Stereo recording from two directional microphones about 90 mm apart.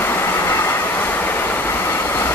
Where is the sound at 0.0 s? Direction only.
25° left (ahead or behind).